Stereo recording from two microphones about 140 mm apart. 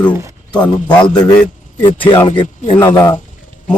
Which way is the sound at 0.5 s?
30° left (ahead or behind).